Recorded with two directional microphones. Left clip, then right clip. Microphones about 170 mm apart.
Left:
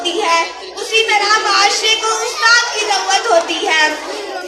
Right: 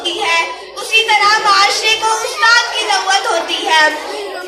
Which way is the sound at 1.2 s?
45° left (ahead or behind).